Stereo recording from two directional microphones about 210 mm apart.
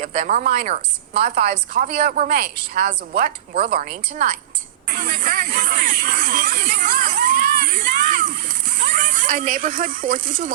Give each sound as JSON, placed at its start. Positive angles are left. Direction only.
{"t": 0.0, "sound": "a woman's voice", "side_deg": -40}